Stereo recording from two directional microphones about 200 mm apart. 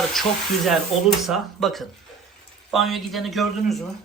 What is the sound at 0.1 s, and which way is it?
Speech, centre (ahead or behind).